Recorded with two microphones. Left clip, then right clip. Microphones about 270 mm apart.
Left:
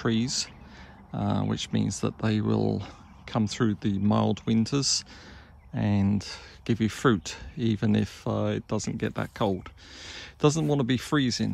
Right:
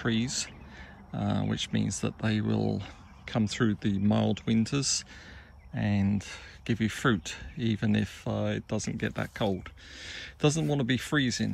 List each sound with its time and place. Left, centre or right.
0.0 s speech: left